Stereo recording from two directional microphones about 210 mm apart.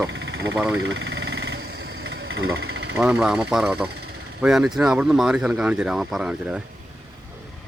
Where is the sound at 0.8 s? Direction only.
60° right (ahead or behind).